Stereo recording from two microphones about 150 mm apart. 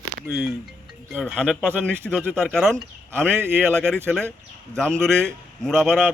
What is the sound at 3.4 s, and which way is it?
Speech, 15° right (ahead or behind).